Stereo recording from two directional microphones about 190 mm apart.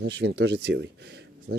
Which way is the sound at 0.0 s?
65° right (ahead or behind).